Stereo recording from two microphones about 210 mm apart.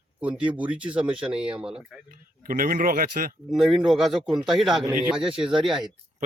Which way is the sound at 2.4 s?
45° right (ahead or behind).